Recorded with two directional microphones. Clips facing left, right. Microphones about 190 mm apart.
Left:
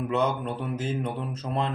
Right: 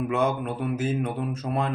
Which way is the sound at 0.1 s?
10° right (ahead or behind).